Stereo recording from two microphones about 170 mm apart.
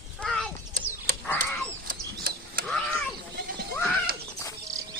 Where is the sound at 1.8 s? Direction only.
60° right (ahead or behind).